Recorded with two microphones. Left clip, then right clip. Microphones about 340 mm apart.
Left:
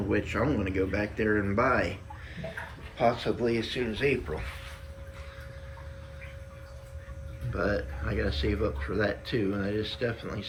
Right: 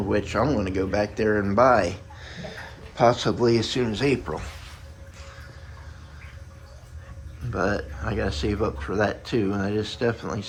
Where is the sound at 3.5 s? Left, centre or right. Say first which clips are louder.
Right 7 dB; centre.